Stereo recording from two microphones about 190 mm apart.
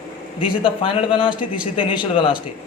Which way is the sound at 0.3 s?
25° left (ahead or behind).